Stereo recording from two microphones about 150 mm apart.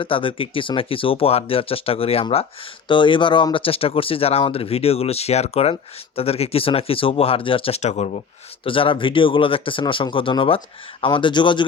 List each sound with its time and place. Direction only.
0.0 s speech: 35° left (ahead or behind)
8.6 s speech: 35° left (ahead or behind)